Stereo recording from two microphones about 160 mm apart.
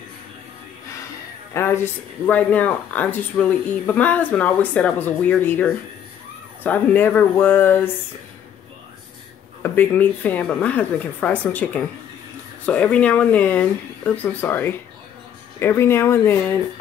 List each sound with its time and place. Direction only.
1.5 s speech: 15° left (ahead or behind)
9.6 s speech: 10° left (ahead or behind)